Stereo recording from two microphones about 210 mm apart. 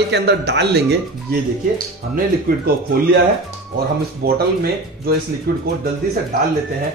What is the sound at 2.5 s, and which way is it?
Speech, 45° right (ahead or behind).